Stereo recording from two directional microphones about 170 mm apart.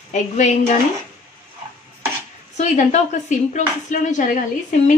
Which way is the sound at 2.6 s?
45° left (ahead or behind).